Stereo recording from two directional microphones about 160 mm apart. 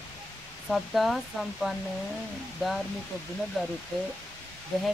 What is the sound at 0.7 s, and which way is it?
Speech, centre (ahead or behind).